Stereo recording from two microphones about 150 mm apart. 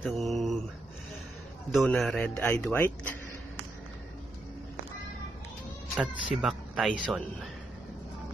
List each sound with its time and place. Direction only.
0.0 s mantra: centre (ahead or behind)
1.7 s speech: centre (ahead or behind)
5.9 s speech: 5° right (ahead or behind)